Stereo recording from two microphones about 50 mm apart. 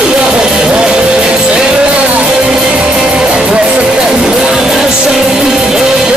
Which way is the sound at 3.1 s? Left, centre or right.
Centre.